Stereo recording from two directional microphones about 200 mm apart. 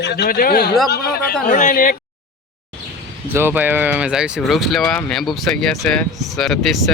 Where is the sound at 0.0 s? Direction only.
55° left (ahead or behind).